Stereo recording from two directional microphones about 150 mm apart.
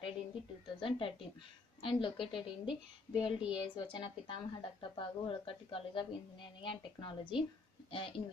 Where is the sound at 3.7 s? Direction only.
30° left (ahead or behind).